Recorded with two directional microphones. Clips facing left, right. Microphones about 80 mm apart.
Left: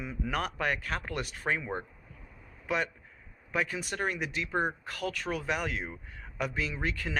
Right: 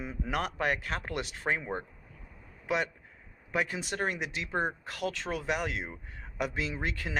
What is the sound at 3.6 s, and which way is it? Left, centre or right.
Speech, right.